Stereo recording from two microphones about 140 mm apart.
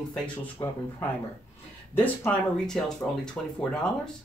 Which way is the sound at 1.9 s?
10° left (ahead or behind).